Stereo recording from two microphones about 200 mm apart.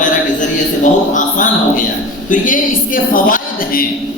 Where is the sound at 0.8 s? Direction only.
40° left (ahead or behind).